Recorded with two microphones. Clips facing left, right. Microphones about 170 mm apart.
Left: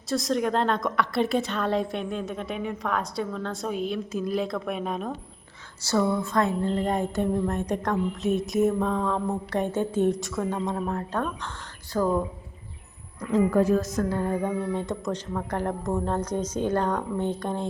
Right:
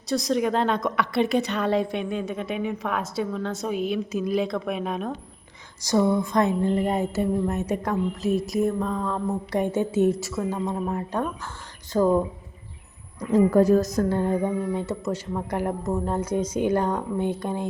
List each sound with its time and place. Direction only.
0.1 s a woman's voice: centre (ahead or behind)
5.8 s a woman's voice: 15° right (ahead or behind); by 9.2 s centre (ahead or behind)
9.5 s speech: 10° right (ahead or behind)
11.9 s a woman's voice: 25° right (ahead or behind)
13.3 s a woman's voice: 40° right (ahead or behind)
14.4 s speech: 10° right (ahead or behind)